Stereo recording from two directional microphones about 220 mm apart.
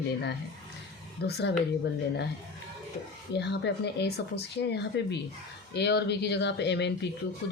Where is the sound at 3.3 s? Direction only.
50° left (ahead or behind).